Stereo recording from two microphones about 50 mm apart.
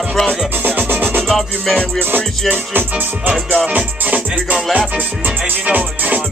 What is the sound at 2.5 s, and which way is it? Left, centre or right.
Music, right.